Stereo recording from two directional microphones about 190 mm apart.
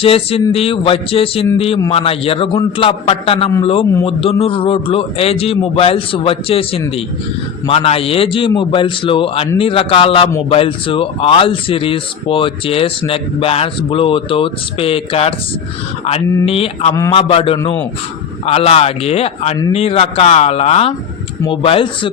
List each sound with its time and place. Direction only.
0.0 s a man's voice: 30° left (ahead or behind)